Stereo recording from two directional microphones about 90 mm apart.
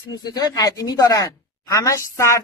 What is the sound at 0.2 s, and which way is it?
Speech, 50° left (ahead or behind).